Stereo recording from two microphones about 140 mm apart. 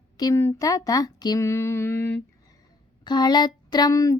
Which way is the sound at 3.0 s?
30° left (ahead or behind).